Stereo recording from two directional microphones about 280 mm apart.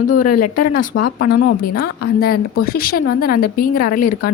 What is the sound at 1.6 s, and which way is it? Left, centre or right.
Speech, left.